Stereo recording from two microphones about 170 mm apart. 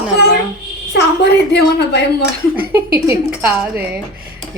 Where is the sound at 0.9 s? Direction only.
80° left.